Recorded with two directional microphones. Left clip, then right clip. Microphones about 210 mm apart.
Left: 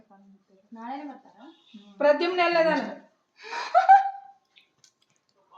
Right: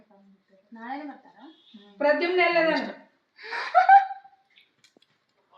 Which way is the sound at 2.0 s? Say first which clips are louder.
Even; 35° left (ahead or behind).